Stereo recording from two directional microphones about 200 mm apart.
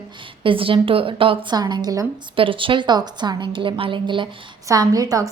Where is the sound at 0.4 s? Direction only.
25° right (ahead or behind).